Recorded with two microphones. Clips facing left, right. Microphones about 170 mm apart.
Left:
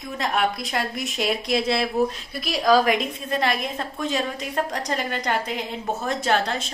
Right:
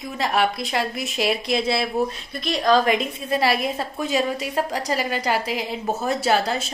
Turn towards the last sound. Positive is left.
turn(degrees=-5)  # may be behind; listen again after turning